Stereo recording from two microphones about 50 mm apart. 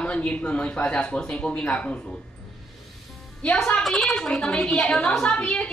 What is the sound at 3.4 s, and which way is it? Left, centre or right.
Speech, centre.